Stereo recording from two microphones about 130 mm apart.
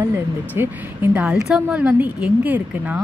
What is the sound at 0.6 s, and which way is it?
Speech, 15° right (ahead or behind).